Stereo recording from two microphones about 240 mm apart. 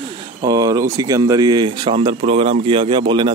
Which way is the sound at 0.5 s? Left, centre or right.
Centre.